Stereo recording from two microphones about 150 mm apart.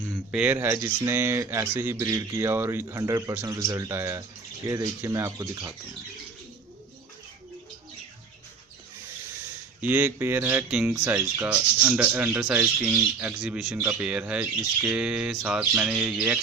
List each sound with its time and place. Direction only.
0.3 s speech: 10° right (ahead or behind)
9.8 s speech: 15° right (ahead or behind)
14.8 s a sound: 5° right (ahead or behind)
15.8 s speech: 10° right (ahead or behind)